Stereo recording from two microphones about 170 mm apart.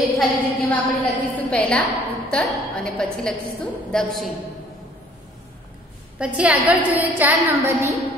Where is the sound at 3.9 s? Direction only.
5° left (ahead or behind).